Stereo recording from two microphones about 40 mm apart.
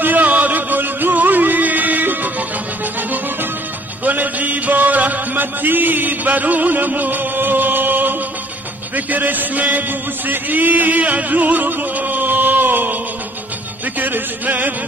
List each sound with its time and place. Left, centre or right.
0.0 s music: right
4.0 s music: right
8.9 s a man's voice: right
13.9 s music: right